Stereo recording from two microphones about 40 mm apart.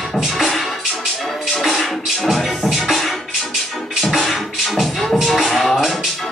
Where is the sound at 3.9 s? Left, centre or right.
Centre.